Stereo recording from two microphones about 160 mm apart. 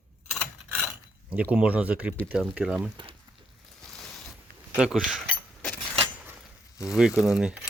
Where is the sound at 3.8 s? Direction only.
Centre (ahead or behind).